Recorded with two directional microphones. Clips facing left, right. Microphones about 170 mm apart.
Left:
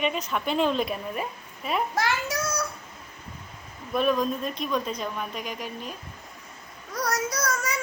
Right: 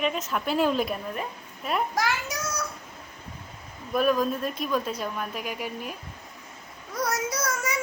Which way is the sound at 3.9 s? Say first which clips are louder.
Right 1 dB; 5° right (ahead or behind).